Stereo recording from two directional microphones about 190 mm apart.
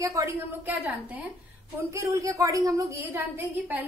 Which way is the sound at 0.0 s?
15° right (ahead or behind).